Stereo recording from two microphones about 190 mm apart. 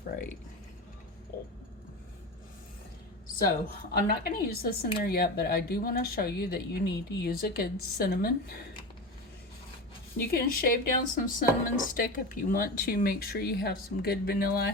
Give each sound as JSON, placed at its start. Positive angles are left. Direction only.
{"t": 1.3, "sound": "a sound", "side_deg": 55}
{"t": 4.0, "sound": "a woman's voice", "side_deg": 50}
{"t": 10.2, "sound": "a woman's voice", "side_deg": 50}